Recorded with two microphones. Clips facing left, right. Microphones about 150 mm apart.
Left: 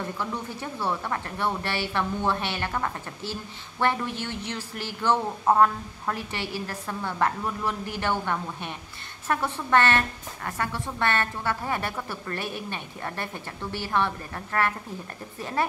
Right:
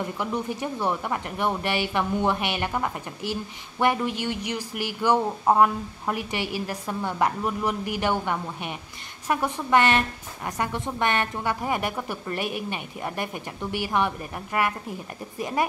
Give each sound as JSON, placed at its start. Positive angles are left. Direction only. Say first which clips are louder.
{"t": 0.0, "sound": "a woman's voice", "louder": "right 3 dB", "side_deg": -15}